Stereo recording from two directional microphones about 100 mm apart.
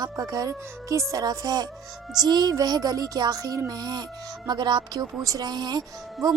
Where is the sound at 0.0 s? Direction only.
40° right (ahead or behind).